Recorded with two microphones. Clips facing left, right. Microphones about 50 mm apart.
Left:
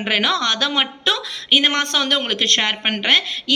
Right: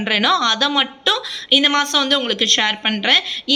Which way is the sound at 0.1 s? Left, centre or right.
Centre.